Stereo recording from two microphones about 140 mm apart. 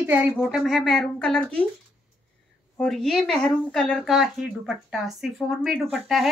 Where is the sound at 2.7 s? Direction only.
5° left (ahead or behind).